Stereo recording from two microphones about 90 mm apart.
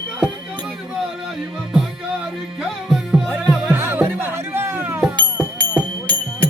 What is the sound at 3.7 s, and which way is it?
Music, 25° right (ahead or behind).